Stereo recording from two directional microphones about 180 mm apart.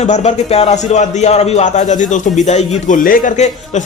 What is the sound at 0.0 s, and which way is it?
A man's voice, 40° left (ahead or behind).